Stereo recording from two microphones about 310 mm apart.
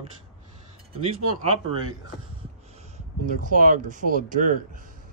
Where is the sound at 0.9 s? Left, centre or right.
Centre.